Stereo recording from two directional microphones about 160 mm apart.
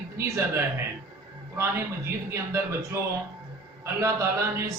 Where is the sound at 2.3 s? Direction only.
20° right (ahead or behind).